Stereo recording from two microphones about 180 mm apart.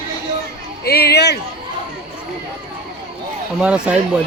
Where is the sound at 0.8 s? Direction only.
60° left (ahead or behind).